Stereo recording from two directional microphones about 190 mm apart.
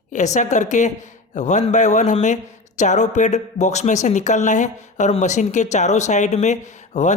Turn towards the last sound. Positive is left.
turn(degrees=40)  # may be behind; listen again after turning